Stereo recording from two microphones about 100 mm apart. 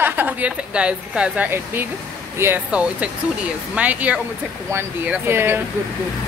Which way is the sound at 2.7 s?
15° right (ahead or behind).